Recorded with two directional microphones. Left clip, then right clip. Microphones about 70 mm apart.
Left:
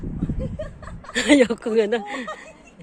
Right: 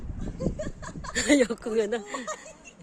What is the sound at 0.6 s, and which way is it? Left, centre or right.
Chuckle, centre.